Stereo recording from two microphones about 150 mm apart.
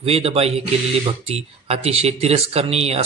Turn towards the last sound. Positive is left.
turn(degrees=-45)  # may be behind; listen again after turning